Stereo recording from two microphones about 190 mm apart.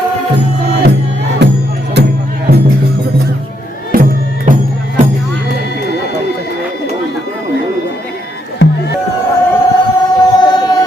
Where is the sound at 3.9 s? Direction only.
45° right (ahead or behind).